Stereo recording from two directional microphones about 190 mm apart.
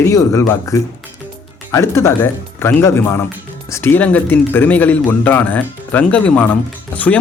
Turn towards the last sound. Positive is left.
turn(degrees=10)  # may be behind; listen again after turning